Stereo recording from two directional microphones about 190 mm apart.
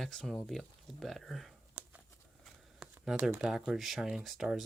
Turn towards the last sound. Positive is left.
turn(degrees=0)  # may be behind; listen again after turning